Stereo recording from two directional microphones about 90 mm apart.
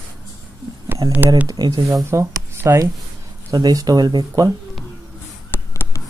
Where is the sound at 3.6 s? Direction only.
45° right (ahead or behind).